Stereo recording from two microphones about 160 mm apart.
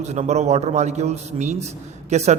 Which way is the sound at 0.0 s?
45° right (ahead or behind).